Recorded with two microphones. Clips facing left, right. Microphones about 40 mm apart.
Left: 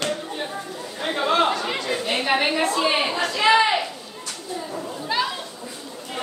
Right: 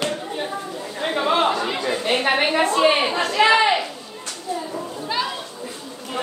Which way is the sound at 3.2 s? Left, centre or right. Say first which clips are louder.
Right 4 dB; right.